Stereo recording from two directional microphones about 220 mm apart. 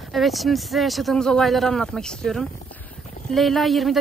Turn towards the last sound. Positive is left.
turn(degrees=0)  # may be behind; listen again after turning